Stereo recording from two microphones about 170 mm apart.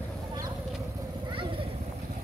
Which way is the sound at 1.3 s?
30° right (ahead or behind).